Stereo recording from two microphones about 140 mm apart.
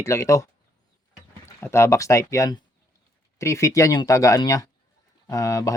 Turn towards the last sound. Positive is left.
turn(degrees=25)  # may be behind; listen again after turning